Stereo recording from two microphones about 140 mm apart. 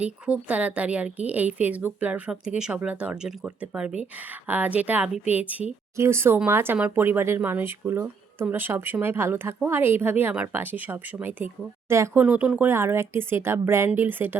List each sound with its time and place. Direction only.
0.0 s speech: 10° right (ahead or behind)